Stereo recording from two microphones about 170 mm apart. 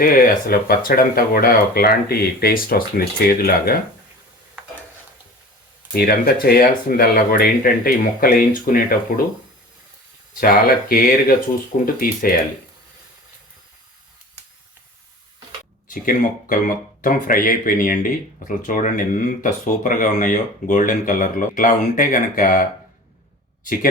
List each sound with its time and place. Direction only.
0.0 s speech: 55° left (ahead or behind)
5.9 s speech: 60° left (ahead or behind)
10.4 s speech: 60° left (ahead or behind)
15.9 s speech: 55° left (ahead or behind)